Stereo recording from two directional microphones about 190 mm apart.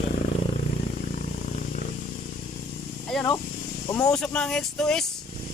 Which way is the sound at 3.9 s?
15° left (ahead or behind).